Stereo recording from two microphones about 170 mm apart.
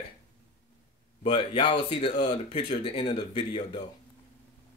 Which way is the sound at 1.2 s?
30° left (ahead or behind).